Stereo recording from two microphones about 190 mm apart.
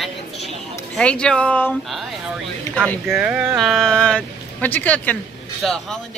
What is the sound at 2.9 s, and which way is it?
Speech, centre (ahead or behind).